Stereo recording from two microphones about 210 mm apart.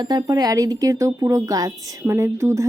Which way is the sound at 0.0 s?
20° right (ahead or behind).